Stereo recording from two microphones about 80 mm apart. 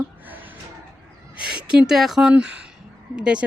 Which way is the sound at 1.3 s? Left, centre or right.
Centre.